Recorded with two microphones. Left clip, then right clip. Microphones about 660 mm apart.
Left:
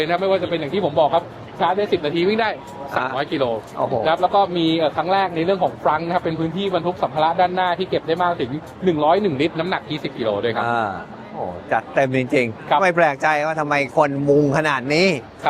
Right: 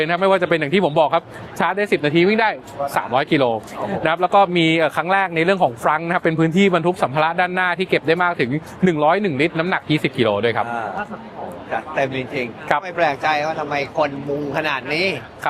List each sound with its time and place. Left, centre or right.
0.0 s speech: right
11.7 s a man's voice: left